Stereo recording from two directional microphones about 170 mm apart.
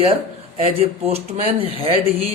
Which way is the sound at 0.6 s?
35° right (ahead or behind).